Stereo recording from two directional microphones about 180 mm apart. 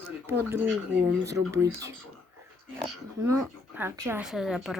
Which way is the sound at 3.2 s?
15° right (ahead or behind).